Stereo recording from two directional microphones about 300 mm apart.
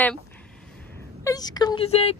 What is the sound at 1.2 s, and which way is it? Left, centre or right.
Speech, centre.